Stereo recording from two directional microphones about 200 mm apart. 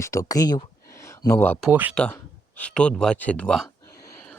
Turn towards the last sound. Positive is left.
turn(degrees=5)  # may be behind; listen again after turning